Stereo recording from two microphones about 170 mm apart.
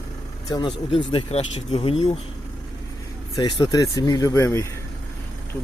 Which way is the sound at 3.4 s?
25° left (ahead or behind).